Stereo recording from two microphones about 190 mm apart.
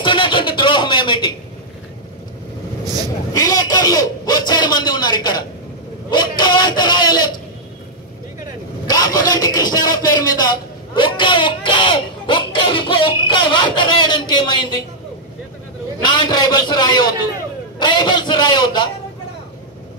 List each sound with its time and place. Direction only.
0.0 s a sound: 25° left (ahead or behind)
2.8 s vehicle: 20° right (ahead or behind)
3.3 s a man's voice: 20° left (ahead or behind)
8.8 s vehicle: 20° left (ahead or behind)
9.3 s a man's voice: 20° left (ahead or behind)
16.0 s a man's voice: 25° left (ahead or behind)